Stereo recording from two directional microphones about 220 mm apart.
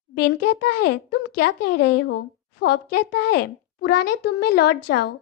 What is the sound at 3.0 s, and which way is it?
Speech, 90° left.